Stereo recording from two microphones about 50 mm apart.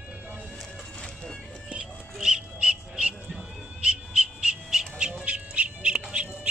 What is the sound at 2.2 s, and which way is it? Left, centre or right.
Music, centre.